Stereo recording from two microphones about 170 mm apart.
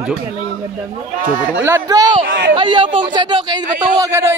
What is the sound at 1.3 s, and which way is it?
Speech, 10° right (ahead or behind).